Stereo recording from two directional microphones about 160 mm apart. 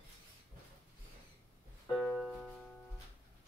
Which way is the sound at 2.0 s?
Centre (ahead or behind).